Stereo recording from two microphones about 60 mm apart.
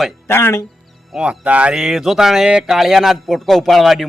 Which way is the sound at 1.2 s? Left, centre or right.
Centre.